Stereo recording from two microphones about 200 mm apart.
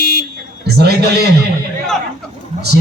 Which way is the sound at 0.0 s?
45° left (ahead or behind).